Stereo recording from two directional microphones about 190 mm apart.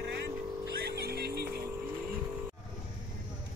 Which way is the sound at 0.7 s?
55° right (ahead or behind).